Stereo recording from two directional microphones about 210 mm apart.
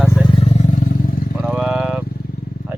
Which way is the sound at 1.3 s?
5° right (ahead or behind).